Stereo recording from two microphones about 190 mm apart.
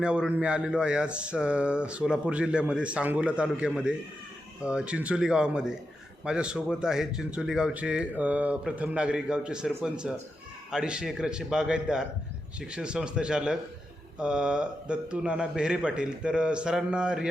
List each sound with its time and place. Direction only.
0.0 s speech: 5° right (ahead or behind)